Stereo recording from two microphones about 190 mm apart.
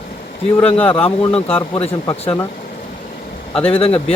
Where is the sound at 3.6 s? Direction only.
30° left (ahead or behind).